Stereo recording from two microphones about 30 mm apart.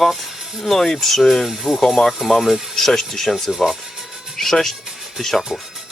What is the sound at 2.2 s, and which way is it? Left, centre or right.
Speech, centre.